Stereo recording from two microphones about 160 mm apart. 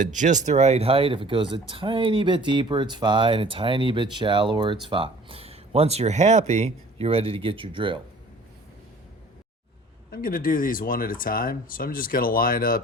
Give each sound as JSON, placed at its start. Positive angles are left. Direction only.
{"t": 0.0, "sound": "speech", "side_deg": -50}
{"t": 10.1, "sound": "speech", "side_deg": 65}